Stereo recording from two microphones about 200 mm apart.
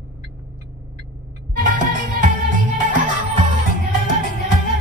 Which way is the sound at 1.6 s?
40° right (ahead or behind).